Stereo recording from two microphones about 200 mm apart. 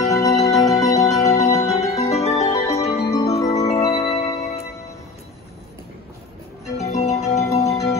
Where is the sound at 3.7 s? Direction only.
20° left (ahead or behind).